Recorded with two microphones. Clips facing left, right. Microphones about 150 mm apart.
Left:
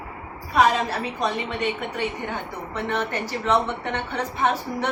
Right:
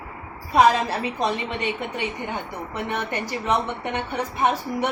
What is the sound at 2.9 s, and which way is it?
A woman's voice, 10° right (ahead or behind).